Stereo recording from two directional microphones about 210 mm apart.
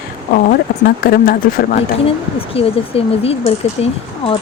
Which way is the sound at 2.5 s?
25° left (ahead or behind).